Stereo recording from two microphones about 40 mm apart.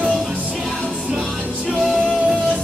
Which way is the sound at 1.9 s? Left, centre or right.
Centre.